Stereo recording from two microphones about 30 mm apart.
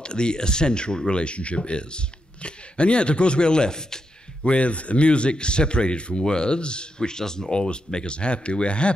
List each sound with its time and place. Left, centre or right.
0.0 s speech: left
4.5 s speech: left